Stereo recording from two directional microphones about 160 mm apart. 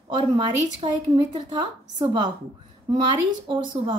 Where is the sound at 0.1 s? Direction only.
30° right (ahead or behind).